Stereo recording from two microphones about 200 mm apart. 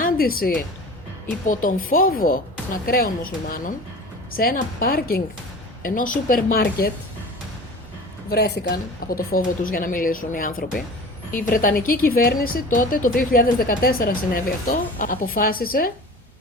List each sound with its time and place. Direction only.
0.0 s a woman's voice: 45° left (ahead or behind)
1.9 s speech: 45° left (ahead or behind)
8.3 s speech: 55° left (ahead or behind)